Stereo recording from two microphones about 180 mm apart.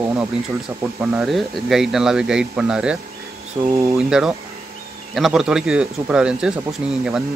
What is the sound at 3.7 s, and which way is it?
Speech, 15° right (ahead or behind).